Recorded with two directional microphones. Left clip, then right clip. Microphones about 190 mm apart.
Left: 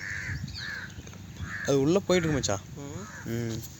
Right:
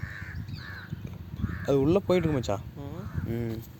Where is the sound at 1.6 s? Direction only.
Centre (ahead or behind).